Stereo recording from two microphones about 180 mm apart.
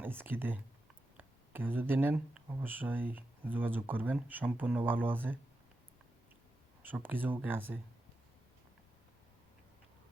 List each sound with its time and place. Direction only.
0.0 s speech: 10° right (ahead or behind)
6.8 s speech: 10° right (ahead or behind)